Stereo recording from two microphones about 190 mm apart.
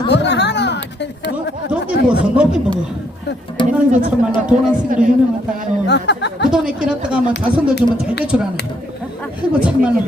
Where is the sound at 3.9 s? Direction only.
45° right (ahead or behind).